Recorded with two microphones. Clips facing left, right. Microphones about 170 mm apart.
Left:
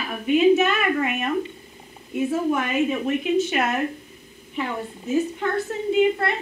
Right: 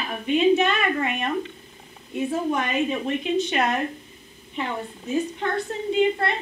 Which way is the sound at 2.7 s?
30° right (ahead or behind).